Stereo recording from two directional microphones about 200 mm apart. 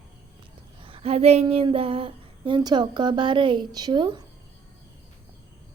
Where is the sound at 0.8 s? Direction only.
25° right (ahead or behind).